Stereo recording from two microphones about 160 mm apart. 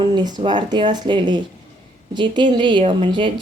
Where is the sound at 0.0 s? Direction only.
25° right (ahead or behind).